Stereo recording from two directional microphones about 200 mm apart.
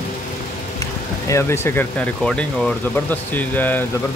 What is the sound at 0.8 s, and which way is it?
Vehicle, 15° left (ahead or behind).